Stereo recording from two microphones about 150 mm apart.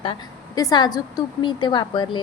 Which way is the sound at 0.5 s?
25° left (ahead or behind).